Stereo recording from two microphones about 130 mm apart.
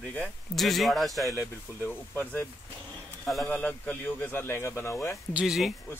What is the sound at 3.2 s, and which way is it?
Speech, 5° left (ahead or behind).